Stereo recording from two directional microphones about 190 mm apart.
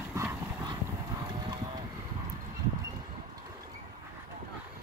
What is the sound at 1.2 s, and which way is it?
Vehicle, 25° right (ahead or behind).